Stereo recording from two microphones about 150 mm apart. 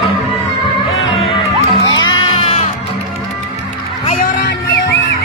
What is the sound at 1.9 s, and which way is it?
Music, 30° left (ahead or behind).